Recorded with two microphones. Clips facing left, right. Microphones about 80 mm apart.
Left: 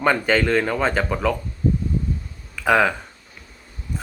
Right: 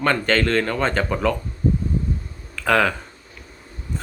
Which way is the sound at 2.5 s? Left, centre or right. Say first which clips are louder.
Left 1 dB; centre.